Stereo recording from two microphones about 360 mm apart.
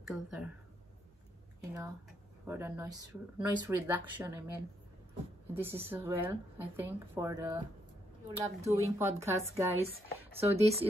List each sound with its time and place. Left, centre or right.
0.1 s speech: centre
2.4 s speech: centre
5.5 s speech: centre